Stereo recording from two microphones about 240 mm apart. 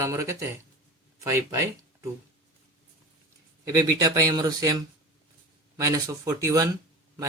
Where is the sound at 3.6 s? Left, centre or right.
Centre.